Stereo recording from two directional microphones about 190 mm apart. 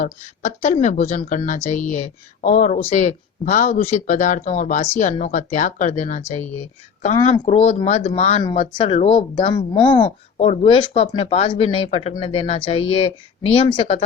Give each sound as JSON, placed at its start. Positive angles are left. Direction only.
{"t": 0.0, "sound": "speech", "side_deg": 40}